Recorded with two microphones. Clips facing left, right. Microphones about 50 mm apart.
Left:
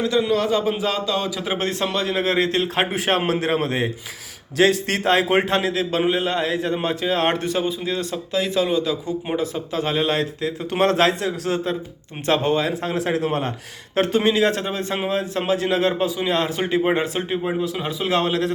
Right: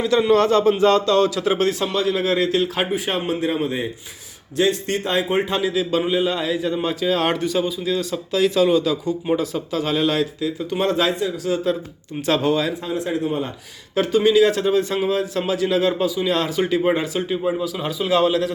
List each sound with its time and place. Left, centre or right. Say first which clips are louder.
0.3 s a man's voice: right 5 dB; centre
1.5 s speech: right 2 dB; left
2.9 s a man's voice: left 2 dB; left
4.5 s a man's voice: left 2 dB; left
5.9 s speech: left 1 dB; left
7.0 s speech: right 2 dB; left
12.2 s speech: even; left
12.7 s a man's voice: left 1 dB; left
13.9 s a man's voice: right 2 dB; left